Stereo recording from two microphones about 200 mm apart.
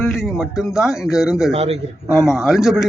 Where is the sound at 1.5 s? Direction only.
30° right (ahead or behind).